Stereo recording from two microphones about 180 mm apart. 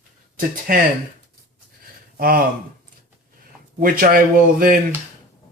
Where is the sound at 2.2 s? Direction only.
55° right (ahead or behind).